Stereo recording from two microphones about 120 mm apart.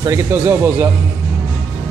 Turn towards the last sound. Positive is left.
turn(degrees=-20)  # may be behind; listen again after turning